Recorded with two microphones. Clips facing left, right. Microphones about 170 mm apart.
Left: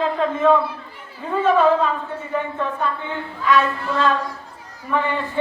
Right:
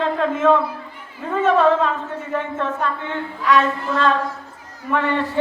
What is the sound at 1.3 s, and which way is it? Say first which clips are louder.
Speech: even; centre (ahead or behind).